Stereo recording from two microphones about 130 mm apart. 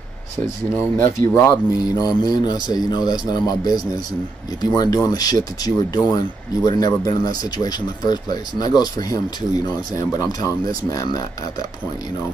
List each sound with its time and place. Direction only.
0.7 s speech: 20° left (ahead or behind)